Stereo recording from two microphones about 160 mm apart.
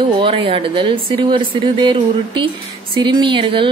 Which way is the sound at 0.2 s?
30° right (ahead or behind).